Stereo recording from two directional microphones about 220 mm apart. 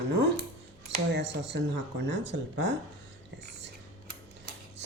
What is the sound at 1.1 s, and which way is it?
Speech, 55° right (ahead or behind).